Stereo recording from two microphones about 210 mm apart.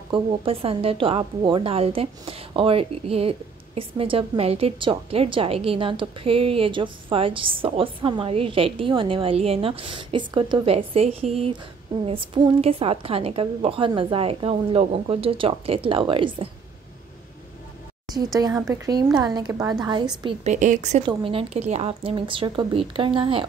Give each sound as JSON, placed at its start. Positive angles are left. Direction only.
{"t": 0.1, "sound": "a woman's voice", "side_deg": -25}
{"t": 18.1, "sound": "a woman's voice", "side_deg": -15}
{"t": 20.2, "sound": "a woman's voice", "side_deg": -35}